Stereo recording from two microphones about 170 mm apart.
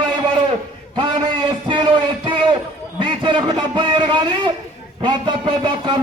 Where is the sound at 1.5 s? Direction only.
30° right (ahead or behind).